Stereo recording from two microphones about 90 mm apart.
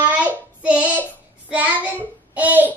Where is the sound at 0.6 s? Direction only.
15° right (ahead or behind).